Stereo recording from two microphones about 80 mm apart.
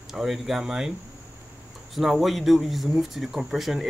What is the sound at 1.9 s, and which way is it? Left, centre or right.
Speech, centre.